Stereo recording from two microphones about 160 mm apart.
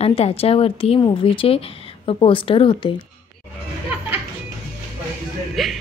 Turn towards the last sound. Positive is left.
turn(degrees=0)  # may be behind; listen again after turning